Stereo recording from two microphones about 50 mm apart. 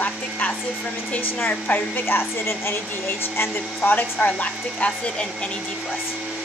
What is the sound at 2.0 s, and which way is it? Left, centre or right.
Speech, left.